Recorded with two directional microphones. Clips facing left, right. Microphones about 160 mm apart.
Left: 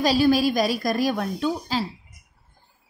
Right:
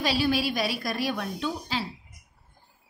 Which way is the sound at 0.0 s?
40° left (ahead or behind).